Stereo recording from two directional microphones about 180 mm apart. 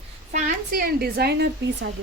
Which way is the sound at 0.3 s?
45° right (ahead or behind).